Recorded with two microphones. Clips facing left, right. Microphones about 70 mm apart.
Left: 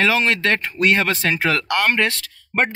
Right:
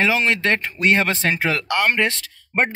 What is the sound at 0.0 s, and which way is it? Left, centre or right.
Speech, centre.